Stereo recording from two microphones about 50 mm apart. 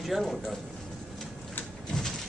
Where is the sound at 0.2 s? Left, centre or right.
Centre.